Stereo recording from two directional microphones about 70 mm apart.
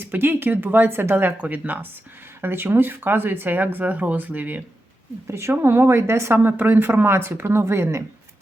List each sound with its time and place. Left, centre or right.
0.0 s speech: right
5.3 s speech: right